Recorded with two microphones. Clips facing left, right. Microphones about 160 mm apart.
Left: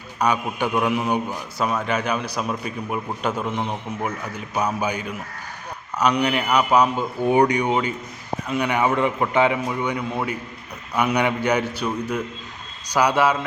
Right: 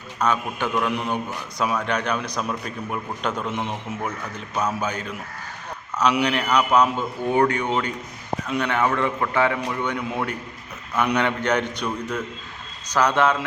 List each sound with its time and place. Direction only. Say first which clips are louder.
0.2 s a man's voice: left 2 dB; 15° left (ahead or behind)
6.2 s a man's voice: left 1 dB; 5° left (ahead or behind)
8.7 s a man's voice: left 2 dB; 15° left (ahead or behind)